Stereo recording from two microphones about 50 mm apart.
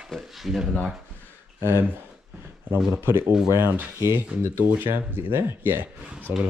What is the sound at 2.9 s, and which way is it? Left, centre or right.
Speech, right.